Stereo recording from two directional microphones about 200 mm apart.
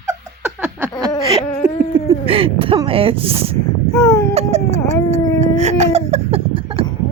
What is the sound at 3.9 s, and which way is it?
Baby cry, 15° left (ahead or behind).